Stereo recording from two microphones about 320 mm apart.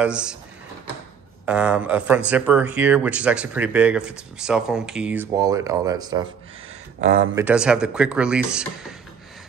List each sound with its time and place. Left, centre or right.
0.0 s speech: centre
1.4 s speech: centre
7.0 s speech: right
7.3 s speech: centre